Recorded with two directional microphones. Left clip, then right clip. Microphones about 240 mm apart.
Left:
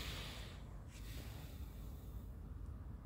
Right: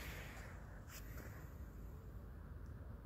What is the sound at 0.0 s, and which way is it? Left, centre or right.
Snort, left.